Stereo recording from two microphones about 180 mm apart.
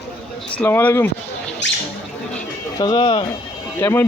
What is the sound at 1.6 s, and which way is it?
Rodents, 80° left.